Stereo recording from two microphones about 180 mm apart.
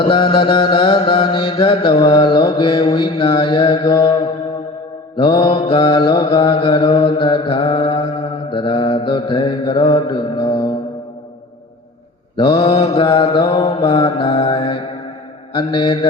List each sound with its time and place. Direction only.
0.0 s mantra: 25° left (ahead or behind)
12.4 s mantra: 25° left (ahead or behind)